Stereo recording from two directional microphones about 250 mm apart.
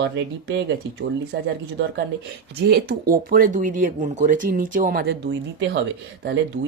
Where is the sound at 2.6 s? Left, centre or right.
Right.